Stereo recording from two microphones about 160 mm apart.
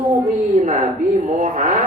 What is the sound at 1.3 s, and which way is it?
Speech, 50° right (ahead or behind).